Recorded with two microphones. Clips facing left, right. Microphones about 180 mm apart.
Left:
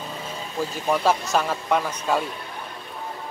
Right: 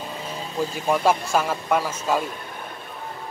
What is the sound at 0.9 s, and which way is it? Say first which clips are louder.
Speech: right 1 dB; 10° right (ahead or behind).